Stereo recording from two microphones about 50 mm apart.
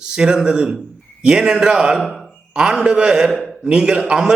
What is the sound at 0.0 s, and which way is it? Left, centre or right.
A man's voice, centre.